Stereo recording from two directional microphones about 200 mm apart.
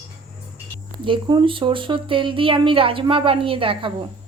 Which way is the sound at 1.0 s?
25° right (ahead or behind).